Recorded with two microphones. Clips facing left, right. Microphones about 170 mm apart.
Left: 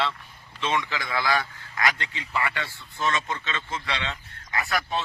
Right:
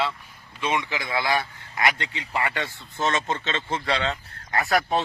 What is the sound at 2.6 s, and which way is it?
A man's voice, 25° right (ahead or behind).